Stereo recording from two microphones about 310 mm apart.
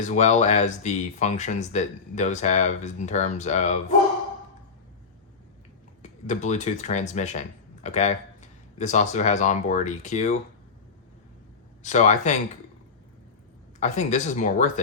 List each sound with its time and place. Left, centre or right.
0.0 s speech: left
6.0 s speech: left
11.8 s speech: left
13.7 s speech: left